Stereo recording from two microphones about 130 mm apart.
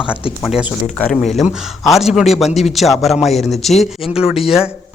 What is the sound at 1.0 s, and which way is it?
Speech, 5° left (ahead or behind).